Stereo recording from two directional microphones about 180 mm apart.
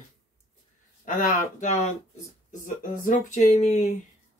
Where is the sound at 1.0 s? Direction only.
50° left (ahead or behind).